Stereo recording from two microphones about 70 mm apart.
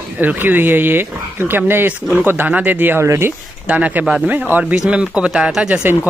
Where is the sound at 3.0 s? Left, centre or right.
Right.